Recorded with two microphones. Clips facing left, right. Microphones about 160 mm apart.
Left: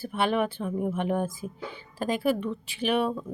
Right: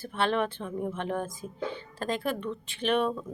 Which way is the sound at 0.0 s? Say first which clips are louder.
Left 2 dB; 10° left (ahead or behind).